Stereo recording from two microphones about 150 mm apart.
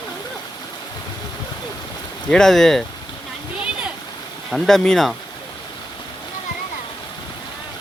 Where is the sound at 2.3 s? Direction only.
5° left (ahead or behind).